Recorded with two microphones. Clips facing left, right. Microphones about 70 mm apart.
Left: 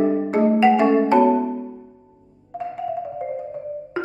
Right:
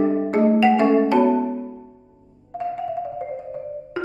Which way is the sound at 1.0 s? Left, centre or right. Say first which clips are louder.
Left 2 dB; left.